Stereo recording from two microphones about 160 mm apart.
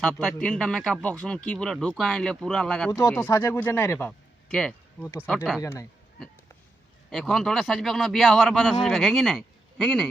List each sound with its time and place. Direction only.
0.0 s speech: 5° left (ahead or behind)
2.9 s speech: 20° left (ahead or behind)
7.1 s speech: 5° left (ahead or behind)